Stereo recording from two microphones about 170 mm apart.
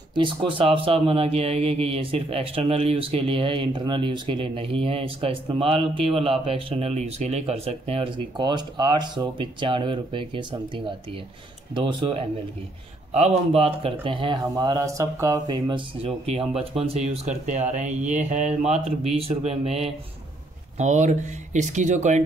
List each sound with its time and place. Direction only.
0.1 s speech: 30° right (ahead or behind)
11.7 s speech: 30° right (ahead or behind)
13.5 s speech: 35° right (ahead or behind)
16.0 s speech: 35° right (ahead or behind)